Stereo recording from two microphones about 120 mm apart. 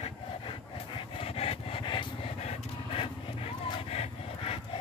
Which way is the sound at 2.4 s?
60° left (ahead or behind).